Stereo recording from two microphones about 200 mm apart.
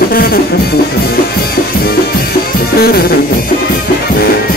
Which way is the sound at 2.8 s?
50° left (ahead or behind).